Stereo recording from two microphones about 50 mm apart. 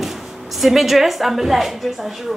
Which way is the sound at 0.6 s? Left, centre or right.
Centre.